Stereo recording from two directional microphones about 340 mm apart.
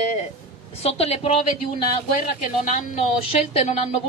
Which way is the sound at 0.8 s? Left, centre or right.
Centre.